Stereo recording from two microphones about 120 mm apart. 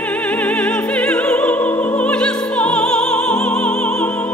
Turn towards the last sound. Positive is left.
turn(degrees=10)  # may be behind; listen again after turning